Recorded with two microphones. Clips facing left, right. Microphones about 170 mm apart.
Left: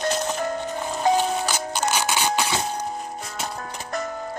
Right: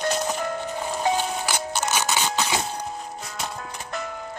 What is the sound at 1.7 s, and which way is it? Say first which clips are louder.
Music: left 2 dB; 10° left (ahead or behind).